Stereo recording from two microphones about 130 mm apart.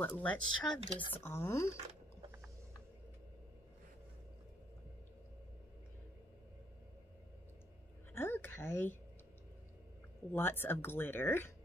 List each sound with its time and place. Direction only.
0.0 s speech: 15° left (ahead or behind)
8.1 s a sound: 15° left (ahead or behind)
10.3 s speech: 15° left (ahead or behind)